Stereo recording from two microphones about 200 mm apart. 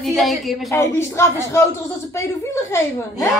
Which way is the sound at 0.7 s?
15° left (ahead or behind).